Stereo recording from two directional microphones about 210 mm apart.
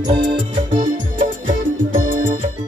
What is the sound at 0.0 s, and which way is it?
Music, 20° right (ahead or behind).